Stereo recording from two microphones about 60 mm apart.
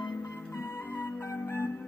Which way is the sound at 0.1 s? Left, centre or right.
Left.